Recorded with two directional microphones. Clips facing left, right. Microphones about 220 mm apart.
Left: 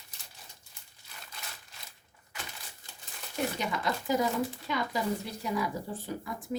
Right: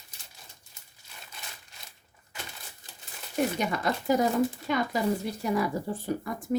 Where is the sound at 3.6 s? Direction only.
55° right (ahead or behind).